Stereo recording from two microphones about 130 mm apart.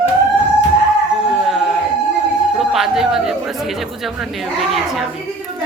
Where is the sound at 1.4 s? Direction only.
Centre (ahead or behind).